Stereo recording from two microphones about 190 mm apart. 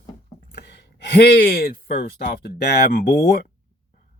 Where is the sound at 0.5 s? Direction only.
60° left (ahead or behind).